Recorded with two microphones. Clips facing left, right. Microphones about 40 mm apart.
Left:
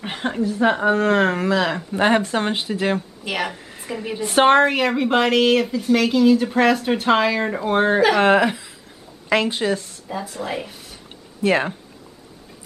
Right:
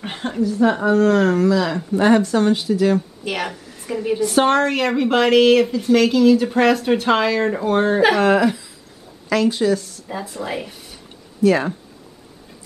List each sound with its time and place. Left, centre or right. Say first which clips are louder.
0.2 s speech: right 2 dB; left
3.3 s a woman's voice: left 2 dB; centre
3.5 s a sound: even; left
3.8 s a woman's voice: right 6 dB; centre
4.2 s a woman's voice: left 3 dB; left
4.7 s speech: right 1 dB; centre
8.2 s a woman's voice: even; left
10.0 s speech: even; centre
11.4 s speech: right 3 dB; left